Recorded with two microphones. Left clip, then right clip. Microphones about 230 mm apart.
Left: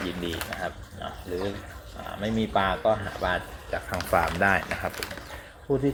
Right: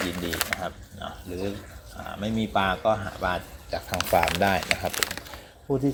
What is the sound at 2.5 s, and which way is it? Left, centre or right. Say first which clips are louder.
Speech: right 1 dB; right.